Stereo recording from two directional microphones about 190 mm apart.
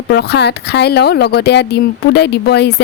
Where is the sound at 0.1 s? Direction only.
60° left (ahead or behind).